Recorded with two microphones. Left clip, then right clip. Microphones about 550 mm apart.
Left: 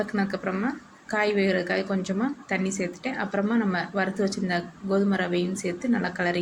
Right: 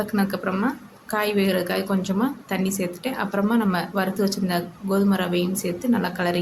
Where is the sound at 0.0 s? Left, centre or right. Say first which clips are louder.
Right 3 dB; right.